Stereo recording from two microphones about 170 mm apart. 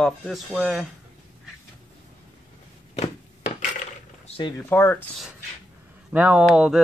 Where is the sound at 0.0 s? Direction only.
Centre (ahead or behind).